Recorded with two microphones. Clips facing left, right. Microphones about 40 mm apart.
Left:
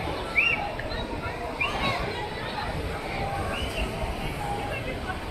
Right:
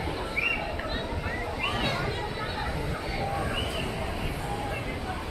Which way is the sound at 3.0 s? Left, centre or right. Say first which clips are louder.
Left 1 dB; left.